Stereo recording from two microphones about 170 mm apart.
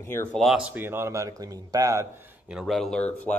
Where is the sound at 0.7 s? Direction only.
15° right (ahead or behind).